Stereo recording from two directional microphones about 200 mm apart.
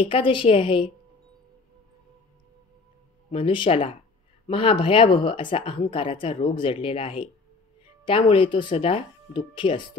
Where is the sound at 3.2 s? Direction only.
25° left (ahead or behind).